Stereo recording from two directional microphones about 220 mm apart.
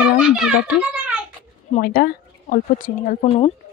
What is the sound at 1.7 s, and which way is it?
Speech, 40° left (ahead or behind).